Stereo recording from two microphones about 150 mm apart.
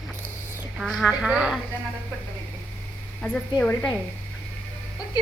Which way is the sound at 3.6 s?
10° left (ahead or behind).